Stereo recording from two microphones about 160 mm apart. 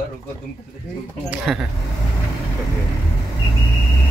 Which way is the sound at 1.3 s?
Centre (ahead or behind).